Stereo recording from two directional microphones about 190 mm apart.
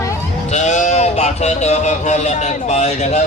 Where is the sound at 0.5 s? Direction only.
40° left (ahead or behind).